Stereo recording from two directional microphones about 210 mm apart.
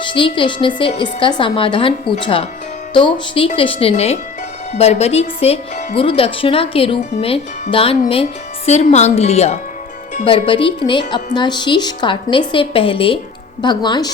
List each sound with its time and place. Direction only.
0.0 s speech: 25° left (ahead or behind)